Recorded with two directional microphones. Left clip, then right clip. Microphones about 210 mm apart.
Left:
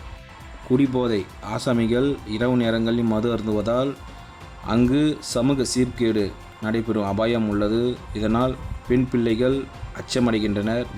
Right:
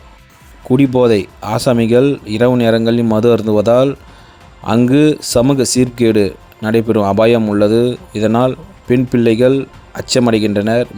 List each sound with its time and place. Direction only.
0.7 s speech: 30° right (ahead or behind)